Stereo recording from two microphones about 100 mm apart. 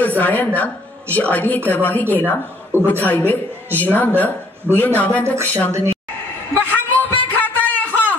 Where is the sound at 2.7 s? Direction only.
25° right (ahead or behind).